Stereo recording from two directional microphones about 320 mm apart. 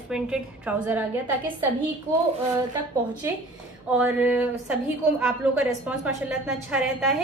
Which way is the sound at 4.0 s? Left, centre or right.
Centre.